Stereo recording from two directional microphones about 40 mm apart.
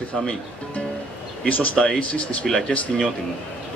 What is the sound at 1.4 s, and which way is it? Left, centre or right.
Speech, left.